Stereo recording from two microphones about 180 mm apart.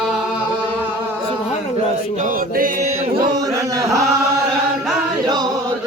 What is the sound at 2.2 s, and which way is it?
Music, 50° right (ahead or behind).